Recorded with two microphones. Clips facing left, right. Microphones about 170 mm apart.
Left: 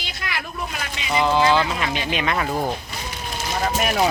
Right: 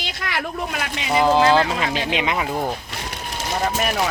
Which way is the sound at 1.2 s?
35° right (ahead or behind).